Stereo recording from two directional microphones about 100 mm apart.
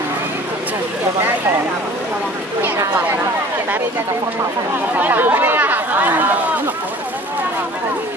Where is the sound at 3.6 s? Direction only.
20° right (ahead or behind).